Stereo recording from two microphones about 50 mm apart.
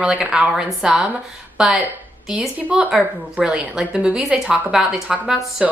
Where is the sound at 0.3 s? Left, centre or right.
Centre.